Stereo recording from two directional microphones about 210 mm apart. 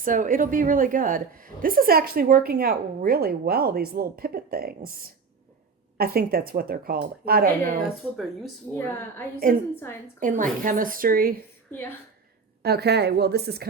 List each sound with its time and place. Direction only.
0.0 s a woman's voice: 40° right (ahead or behind)
8.7 s a woman's voice: 10° left (ahead or behind)
10.2 s speech: 40° right (ahead or behind)
12.6 s a woman's voice: 50° right (ahead or behind)